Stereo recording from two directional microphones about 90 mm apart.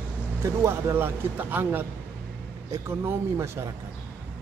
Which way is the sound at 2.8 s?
30° right (ahead or behind).